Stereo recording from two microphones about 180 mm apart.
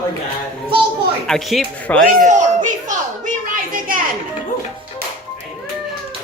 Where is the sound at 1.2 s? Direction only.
5° left (ahead or behind).